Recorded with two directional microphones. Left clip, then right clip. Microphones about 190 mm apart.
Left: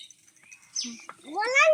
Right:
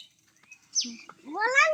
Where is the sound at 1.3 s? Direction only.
20° right (ahead or behind).